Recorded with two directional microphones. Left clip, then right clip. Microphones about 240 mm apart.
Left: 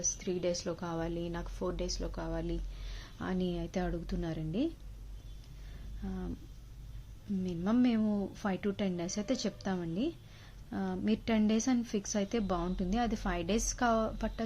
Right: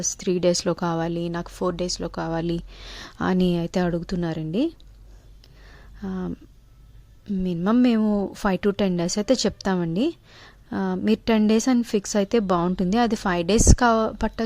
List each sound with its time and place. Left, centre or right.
0.0 s a woman's voice: right
6.0 s a woman's voice: right
7.4 s a woman's voice: right